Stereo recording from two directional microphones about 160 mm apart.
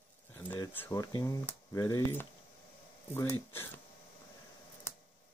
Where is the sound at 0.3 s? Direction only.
10° left (ahead or behind).